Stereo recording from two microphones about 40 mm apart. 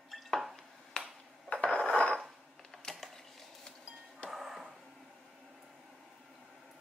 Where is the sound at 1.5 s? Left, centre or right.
Left.